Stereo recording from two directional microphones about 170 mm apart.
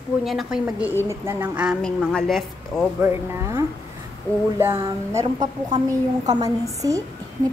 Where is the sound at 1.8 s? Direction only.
5° left (ahead or behind).